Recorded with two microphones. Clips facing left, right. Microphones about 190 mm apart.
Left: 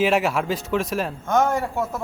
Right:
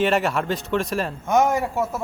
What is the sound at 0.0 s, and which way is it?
Speech, 5° left (ahead or behind).